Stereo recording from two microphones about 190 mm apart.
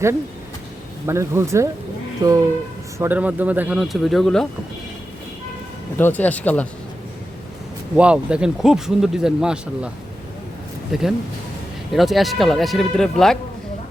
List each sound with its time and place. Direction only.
1.0 s speech: 15° right (ahead or behind)
3.0 s speech: 10° right (ahead or behind)
6.0 s speech: 10° left (ahead or behind)
7.9 s speech: 5° right (ahead or behind)
10.9 s speech: centre (ahead or behind)